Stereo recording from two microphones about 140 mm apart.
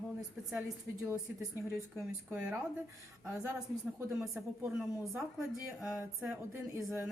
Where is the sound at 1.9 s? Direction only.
10° right (ahead or behind).